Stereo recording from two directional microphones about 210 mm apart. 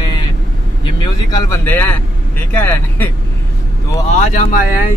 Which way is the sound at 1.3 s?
10° left (ahead or behind).